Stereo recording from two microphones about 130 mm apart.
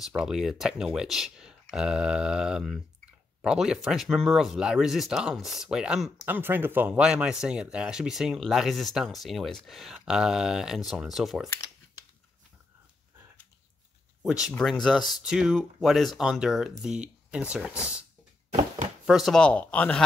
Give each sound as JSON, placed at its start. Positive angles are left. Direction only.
{"t": 0.2, "sound": "speech", "side_deg": -5}
{"t": 6.2, "sound": "speech", "side_deg": -15}
{"t": 11.4, "sound": "speech", "side_deg": 25}
{"t": 14.2, "sound": "speech", "side_deg": -5}
{"t": 18.5, "sound": "chopping", "side_deg": -75}
{"t": 19.0, "sound": "speech", "side_deg": 0}